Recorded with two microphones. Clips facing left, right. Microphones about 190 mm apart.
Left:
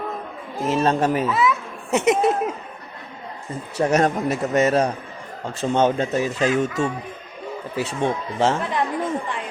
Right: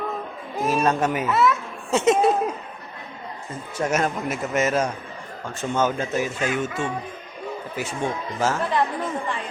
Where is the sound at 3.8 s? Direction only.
35° left (ahead or behind).